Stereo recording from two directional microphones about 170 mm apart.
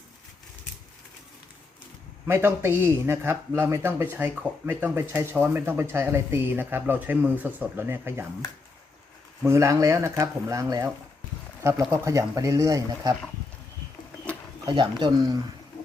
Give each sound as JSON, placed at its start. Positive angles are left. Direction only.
{"t": 2.2, "sound": "speech", "side_deg": -15}
{"t": 9.5, "sound": "speech", "side_deg": -15}
{"t": 14.6, "sound": "speech", "side_deg": -25}